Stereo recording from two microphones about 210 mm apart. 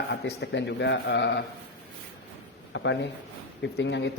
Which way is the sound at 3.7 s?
60° left (ahead or behind).